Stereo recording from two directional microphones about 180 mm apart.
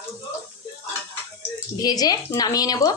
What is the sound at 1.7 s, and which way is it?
Speech, 20° left (ahead or behind).